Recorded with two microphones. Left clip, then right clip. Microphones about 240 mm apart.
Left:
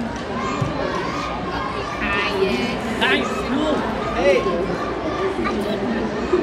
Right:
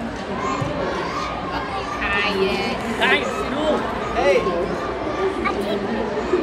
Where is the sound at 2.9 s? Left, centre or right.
Right.